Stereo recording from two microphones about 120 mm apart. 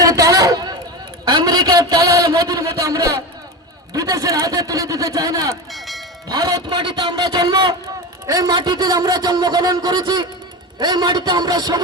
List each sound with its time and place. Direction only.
0.0 s a sound: 30° right (ahead or behind)
1.2 s a man's voice: 35° right (ahead or behind)
5.7 s speech: centre (ahead or behind)
6.2 s a man's voice: 35° right (ahead or behind)